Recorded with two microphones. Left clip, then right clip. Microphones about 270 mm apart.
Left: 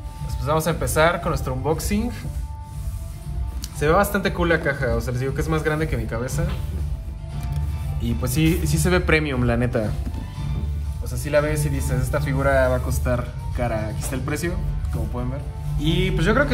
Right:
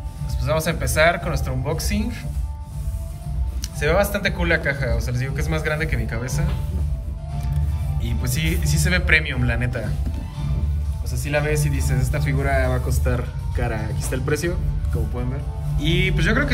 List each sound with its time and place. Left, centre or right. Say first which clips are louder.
0.4 s speech: left 1 dB; centre
3.8 s speech: left 1 dB; centre
8.0 s speech: left 5 dB; centre
11.2 s speech: left 2 dB; centre
15.8 s speech: right 1 dB; centre